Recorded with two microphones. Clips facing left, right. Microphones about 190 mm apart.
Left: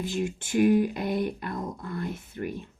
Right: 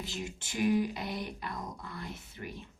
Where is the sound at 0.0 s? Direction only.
55° left (ahead or behind).